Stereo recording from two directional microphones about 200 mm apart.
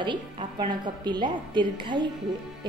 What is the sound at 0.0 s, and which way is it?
A woman's voice, 25° right (ahead or behind).